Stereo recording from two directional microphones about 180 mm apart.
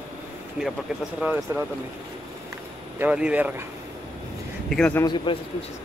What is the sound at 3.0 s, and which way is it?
Speech, 5° right (ahead or behind).